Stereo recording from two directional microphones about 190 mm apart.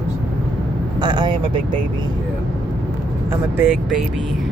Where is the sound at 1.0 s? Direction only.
25° right (ahead or behind).